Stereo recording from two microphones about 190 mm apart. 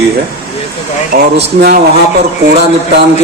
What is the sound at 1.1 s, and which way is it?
Speech, 55° right (ahead or behind).